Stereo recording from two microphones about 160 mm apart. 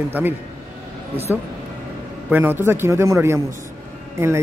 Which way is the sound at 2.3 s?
15° right (ahead or behind).